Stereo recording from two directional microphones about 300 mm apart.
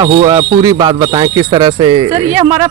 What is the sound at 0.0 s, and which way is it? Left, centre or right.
Speech, centre.